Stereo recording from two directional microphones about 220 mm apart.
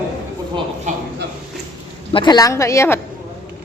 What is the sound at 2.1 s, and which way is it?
Speech, 20° left (ahead or behind).